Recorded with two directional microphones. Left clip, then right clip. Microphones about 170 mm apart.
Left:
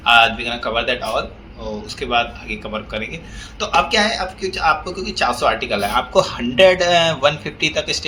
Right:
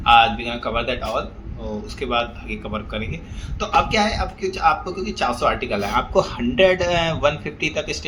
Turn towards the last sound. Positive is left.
turn(degrees=-10)  # may be behind; listen again after turning